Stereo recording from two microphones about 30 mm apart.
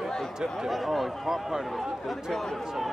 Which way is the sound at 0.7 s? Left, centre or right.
Centre.